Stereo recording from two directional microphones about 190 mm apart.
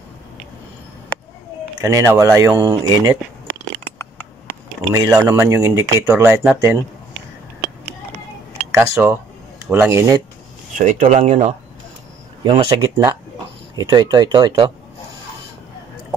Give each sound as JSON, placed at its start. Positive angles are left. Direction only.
{"t": 1.8, "sound": "speech", "side_deg": -15}
{"t": 4.9, "sound": "speech", "side_deg": -20}
{"t": 8.7, "sound": "speech", "side_deg": -15}
{"t": 10.8, "sound": "speech", "side_deg": -40}
{"t": 12.4, "sound": "speech", "side_deg": -25}